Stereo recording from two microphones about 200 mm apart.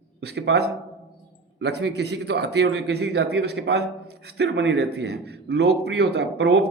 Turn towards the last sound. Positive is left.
turn(degrees=-55)  # may be behind; listen again after turning